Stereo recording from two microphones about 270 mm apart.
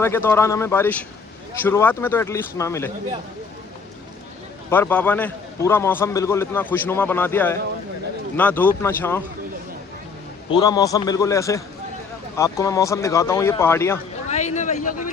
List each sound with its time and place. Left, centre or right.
0.0 s a man's voice: centre
4.7 s a man's voice: centre
10.5 s a man's voice: centre
14.3 s a sound: left